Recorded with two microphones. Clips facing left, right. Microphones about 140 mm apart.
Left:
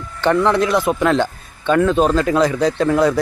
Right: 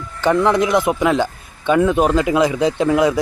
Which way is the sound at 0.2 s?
15° right (ahead or behind).